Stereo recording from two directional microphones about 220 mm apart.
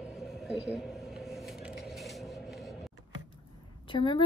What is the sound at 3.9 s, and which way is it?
Speech, 20° left (ahead or behind).